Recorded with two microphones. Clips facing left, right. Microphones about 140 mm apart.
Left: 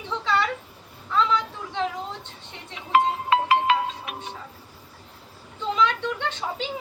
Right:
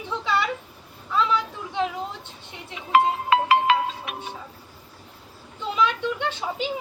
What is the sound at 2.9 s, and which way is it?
Music, 80° right.